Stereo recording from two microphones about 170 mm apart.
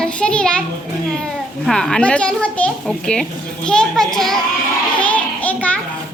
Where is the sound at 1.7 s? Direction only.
5° left (ahead or behind).